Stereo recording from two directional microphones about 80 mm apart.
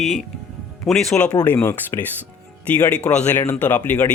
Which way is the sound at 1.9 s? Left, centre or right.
Left.